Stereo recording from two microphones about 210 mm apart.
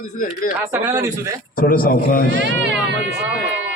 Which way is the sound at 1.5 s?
40° left (ahead or behind).